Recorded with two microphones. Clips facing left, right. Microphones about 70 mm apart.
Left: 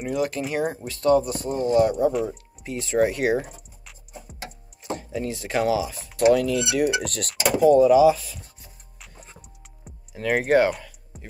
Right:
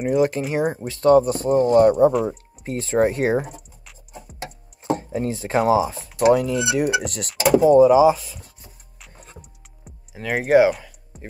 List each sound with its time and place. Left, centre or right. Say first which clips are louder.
0.1 s speech: right 5 dB; right
3.4 s music: right 5 dB; centre
4.8 s a sound: right 5 dB; right
5.7 s speech: right 5 dB; right
6.1 s speech: right 1 dB; right
8.5 s music: right 1 dB; centre
11.1 s music: right 5 dB; centre